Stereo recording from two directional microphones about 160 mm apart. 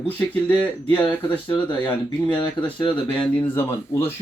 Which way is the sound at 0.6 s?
10° left (ahead or behind).